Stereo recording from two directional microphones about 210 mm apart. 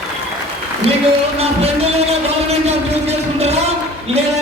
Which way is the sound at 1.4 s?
30° right (ahead or behind).